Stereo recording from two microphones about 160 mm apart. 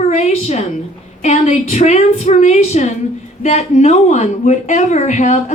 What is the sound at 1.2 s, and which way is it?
Speech, 45° left (ahead or behind).